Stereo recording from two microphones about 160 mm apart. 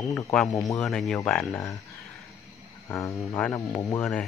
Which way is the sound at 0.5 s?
20° left (ahead or behind).